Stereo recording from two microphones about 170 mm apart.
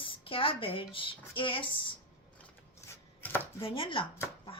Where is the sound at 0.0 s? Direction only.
30° left (ahead or behind).